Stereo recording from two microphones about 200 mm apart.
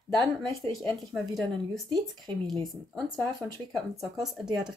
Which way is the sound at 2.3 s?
25° right (ahead or behind).